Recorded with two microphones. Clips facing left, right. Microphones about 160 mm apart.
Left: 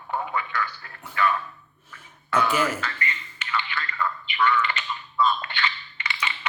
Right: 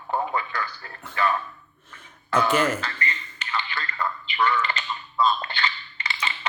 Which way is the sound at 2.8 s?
35° right (ahead or behind).